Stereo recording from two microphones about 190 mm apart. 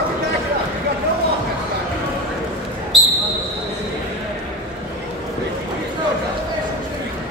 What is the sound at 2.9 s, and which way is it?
Basketball bounce, centre (ahead or behind).